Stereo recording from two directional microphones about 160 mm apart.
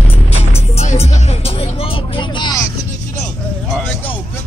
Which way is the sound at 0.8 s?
40° left (ahead or behind).